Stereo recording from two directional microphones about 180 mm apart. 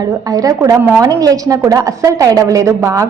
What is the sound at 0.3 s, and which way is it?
A woman's voice, 20° right (ahead or behind).